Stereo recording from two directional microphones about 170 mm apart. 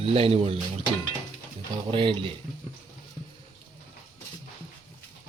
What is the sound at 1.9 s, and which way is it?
Speech, 30° right (ahead or behind).